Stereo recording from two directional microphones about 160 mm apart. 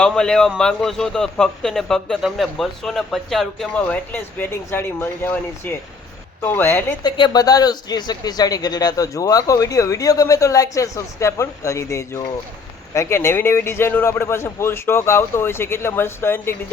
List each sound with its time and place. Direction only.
0.0 s a man's voice: 5° left (ahead or behind)
7.0 s a man's voice: 25° left (ahead or behind)